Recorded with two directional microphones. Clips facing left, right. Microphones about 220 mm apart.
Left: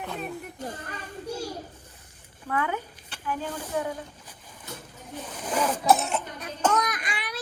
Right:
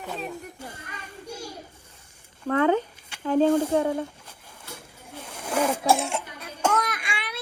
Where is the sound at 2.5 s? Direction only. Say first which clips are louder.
Right 6 dB; 45° right (ahead or behind).